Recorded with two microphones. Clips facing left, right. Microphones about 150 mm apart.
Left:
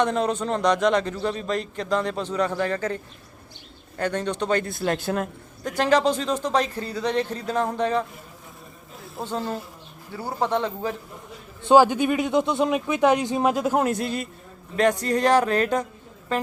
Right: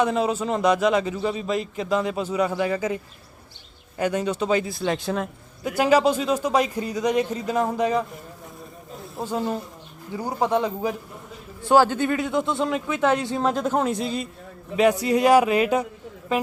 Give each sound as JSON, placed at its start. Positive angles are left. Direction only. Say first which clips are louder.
{"t": 0.0, "sound": "a man's voice", "louder": "right 1 dB", "side_deg": -5}
{"t": 5.6, "sound": "a man's voice", "louder": "right 2 dB", "side_deg": -10}
{"t": 9.2, "sound": "a man's voice", "louder": "right 2 dB", "side_deg": -10}
{"t": 11.6, "sound": "speech", "louder": "left 2 dB", "side_deg": 15}
{"t": 14.8, "sound": "a man's voice", "louder": "right 2 dB", "side_deg": -10}